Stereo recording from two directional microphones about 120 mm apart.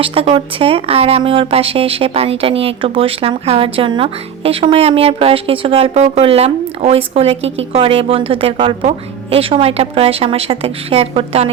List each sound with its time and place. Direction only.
0.0 s speech: 50° right (ahead or behind)
8.8 s a woman's voice: 60° right (ahead or behind)